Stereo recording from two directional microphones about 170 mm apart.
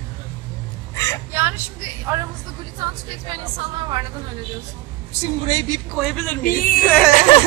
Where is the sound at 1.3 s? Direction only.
15° right (ahead or behind).